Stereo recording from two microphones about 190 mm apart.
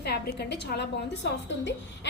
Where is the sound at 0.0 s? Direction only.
60° left (ahead or behind).